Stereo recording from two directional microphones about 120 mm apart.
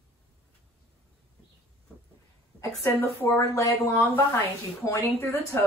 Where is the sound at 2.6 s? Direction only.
20° left (ahead or behind).